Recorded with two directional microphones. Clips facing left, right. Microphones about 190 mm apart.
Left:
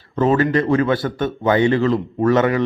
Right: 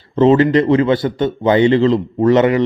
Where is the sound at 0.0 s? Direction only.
20° right (ahead or behind).